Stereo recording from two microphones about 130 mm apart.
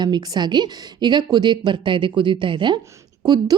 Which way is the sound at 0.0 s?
30° right (ahead or behind).